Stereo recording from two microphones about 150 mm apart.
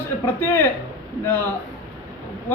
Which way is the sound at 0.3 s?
15° left (ahead or behind).